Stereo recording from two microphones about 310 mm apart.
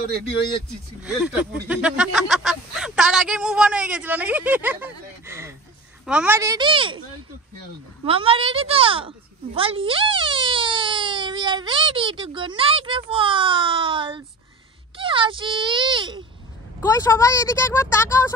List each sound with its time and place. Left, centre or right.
0.7 s a woman's voice: centre
8.0 s a woman's voice: centre
16.8 s speech: centre